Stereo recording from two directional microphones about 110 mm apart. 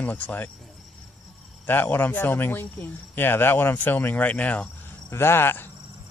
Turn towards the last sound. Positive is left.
turn(degrees=20)  # may be behind; listen again after turning